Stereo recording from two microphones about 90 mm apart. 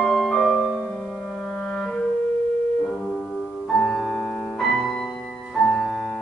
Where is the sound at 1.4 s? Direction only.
15° left (ahead or behind).